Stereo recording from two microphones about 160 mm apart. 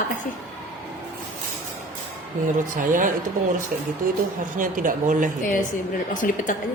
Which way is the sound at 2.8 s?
55° right (ahead or behind).